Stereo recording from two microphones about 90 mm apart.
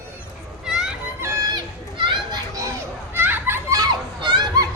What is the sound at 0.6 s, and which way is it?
Children playing, 5° right (ahead or behind).